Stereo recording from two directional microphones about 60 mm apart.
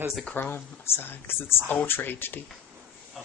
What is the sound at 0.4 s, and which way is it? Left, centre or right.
Speech, left.